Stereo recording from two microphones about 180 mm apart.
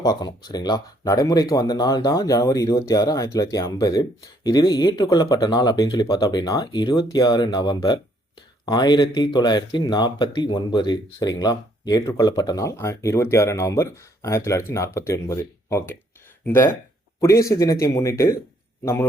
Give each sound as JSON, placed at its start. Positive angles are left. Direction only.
{"t": 0.0, "sound": "speech", "side_deg": 20}
{"t": 17.2, "sound": "speech", "side_deg": 15}